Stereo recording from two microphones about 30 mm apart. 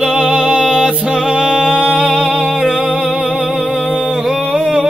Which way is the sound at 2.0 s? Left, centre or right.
Centre.